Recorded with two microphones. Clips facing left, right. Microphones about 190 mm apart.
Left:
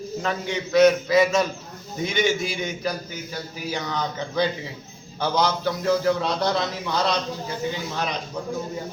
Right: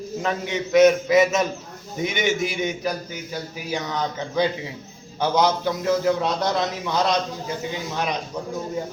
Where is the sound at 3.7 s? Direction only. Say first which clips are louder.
Right 2 dB; 15° right (ahead or behind).